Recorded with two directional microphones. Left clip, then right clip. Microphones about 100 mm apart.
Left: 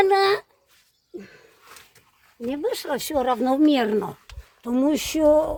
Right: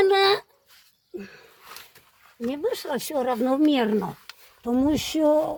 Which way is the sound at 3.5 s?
15° left (ahead or behind).